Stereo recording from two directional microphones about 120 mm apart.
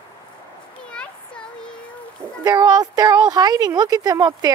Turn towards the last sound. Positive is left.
turn(degrees=-35)  # may be behind; listen again after turning